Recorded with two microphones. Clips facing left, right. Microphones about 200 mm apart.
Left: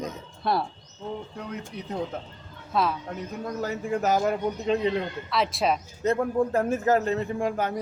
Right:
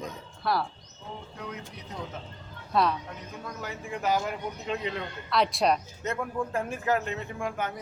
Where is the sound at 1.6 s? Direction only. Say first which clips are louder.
Left 8 dB; 50° left (ahead or behind).